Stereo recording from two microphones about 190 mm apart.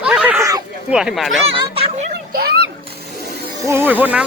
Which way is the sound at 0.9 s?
5° right (ahead or behind).